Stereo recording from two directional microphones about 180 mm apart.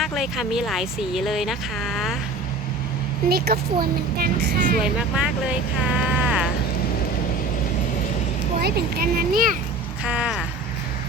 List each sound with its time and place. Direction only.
0.0 s speech: centre (ahead or behind)
3.2 s a woman's voice: 60° right (ahead or behind)
4.8 s speech: 5° right (ahead or behind)
8.6 s a woman's voice: 55° right (ahead or behind)
10.0 s speech: 5° right (ahead or behind)